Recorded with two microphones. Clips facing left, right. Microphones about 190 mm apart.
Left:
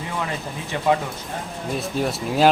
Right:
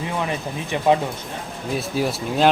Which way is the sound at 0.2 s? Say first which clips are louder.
Right 3 dB; 20° right (ahead or behind).